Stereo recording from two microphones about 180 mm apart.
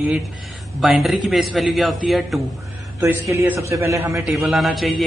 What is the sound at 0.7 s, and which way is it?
Speech, centre (ahead or behind).